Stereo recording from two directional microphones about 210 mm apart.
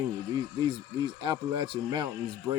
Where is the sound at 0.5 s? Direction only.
20° right (ahead or behind).